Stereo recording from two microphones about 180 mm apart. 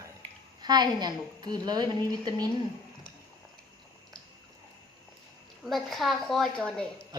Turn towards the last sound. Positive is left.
turn(degrees=5)  # may be behind; listen again after turning